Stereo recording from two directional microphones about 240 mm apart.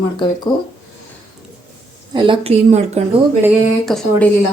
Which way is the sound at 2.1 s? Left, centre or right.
Right.